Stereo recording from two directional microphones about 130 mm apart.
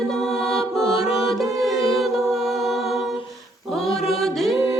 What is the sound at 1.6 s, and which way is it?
A capella, centre (ahead or behind).